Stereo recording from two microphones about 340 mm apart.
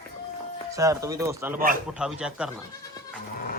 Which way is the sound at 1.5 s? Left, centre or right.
Right.